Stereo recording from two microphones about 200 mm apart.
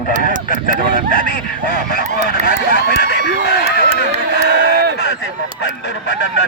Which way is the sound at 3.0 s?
55° left (ahead or behind).